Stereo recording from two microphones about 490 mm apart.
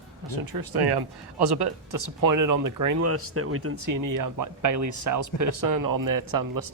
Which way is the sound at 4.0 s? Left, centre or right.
Right.